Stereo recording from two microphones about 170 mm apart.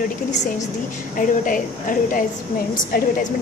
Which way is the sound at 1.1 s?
50° left (ahead or behind).